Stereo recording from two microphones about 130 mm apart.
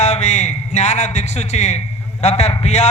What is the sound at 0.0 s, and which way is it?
A man's voice, 60° left (ahead or behind).